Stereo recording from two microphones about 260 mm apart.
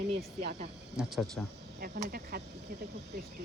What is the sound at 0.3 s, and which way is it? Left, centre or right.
Speech, right.